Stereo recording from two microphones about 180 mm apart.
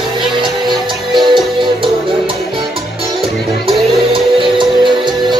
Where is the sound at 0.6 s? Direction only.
Centre (ahead or behind).